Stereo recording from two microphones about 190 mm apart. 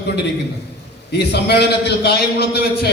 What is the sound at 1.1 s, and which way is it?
A man's voice, 60° left (ahead or behind).